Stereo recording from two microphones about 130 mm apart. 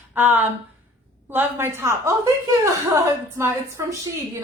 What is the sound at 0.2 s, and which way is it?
A woman's voice, 15° right (ahead or behind).